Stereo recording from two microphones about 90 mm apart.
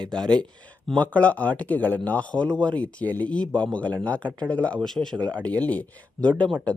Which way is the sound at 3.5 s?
55° right (ahead or behind).